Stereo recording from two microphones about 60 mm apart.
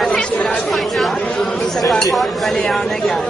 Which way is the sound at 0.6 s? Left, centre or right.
Centre.